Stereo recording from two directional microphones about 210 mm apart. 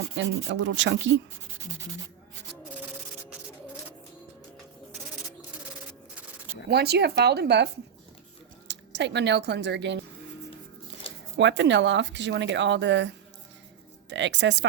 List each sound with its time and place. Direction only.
0.2 s speech: 60° right (ahead or behind)
6.7 s speech: 50° right (ahead or behind)
11.3 s speech: 60° right (ahead or behind)